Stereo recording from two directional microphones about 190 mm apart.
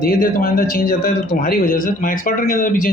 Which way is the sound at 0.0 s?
50° left (ahead or behind).